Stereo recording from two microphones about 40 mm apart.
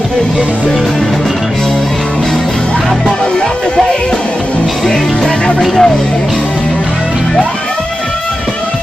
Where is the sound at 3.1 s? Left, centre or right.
Centre.